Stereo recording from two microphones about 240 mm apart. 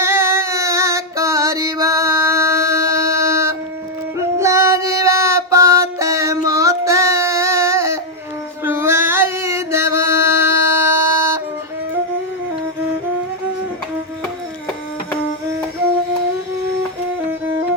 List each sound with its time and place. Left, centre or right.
0.0 s female singing: centre
4.4 s music: centre
8.6 s a sound: centre